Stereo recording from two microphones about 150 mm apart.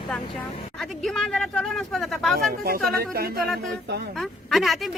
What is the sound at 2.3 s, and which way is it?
Speech, 85° right.